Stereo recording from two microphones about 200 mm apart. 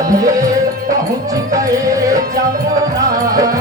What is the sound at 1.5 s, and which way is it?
Music, 15° right (ahead or behind).